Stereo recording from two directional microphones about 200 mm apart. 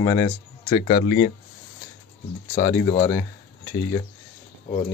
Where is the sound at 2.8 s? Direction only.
30° left (ahead or behind).